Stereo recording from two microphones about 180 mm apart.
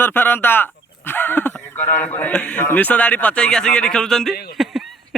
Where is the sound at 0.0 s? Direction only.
10° left (ahead or behind).